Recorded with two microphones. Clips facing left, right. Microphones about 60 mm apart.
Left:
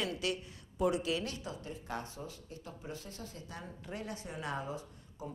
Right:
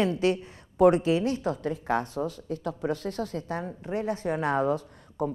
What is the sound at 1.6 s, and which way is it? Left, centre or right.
Speech, right.